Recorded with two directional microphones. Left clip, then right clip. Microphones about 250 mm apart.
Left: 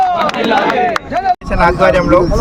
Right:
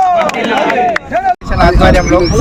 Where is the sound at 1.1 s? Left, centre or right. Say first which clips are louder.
Right 2 dB; centre.